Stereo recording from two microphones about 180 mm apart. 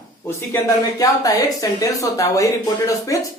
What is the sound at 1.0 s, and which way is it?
Speech, 20° left (ahead or behind).